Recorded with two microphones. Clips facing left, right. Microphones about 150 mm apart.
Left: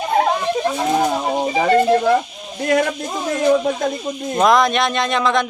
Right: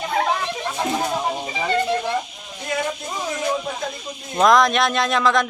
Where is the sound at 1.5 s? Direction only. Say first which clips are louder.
Left 8 dB; 50° left (ahead or behind).